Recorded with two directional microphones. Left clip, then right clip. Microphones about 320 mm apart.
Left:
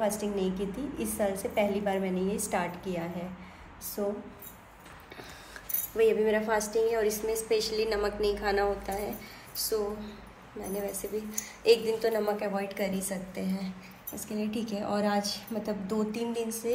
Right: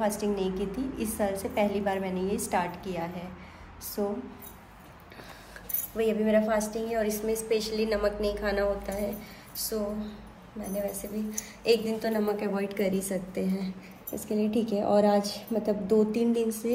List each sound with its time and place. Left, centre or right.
0.0 s a woman's voice: centre
5.9 s a woman's voice: centre